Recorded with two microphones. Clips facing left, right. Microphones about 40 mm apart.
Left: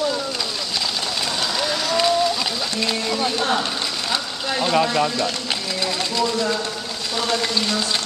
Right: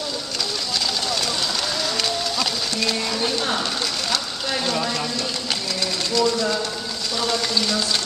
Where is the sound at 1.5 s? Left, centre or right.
Centre.